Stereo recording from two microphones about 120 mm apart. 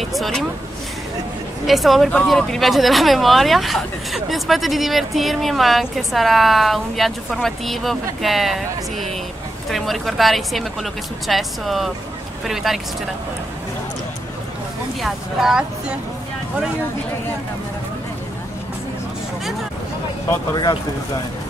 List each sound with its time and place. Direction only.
0.0 s speech: centre (ahead or behind)
1.7 s speech: centre (ahead or behind)
15.0 s speech: centre (ahead or behind)